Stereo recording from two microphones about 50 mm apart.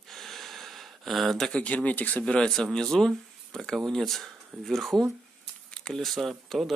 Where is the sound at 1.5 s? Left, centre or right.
Left.